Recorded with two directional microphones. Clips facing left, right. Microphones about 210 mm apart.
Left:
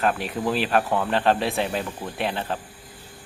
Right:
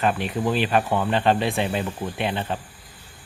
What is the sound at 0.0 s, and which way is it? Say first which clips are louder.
Speech: right 1 dB; centre (ahead or behind).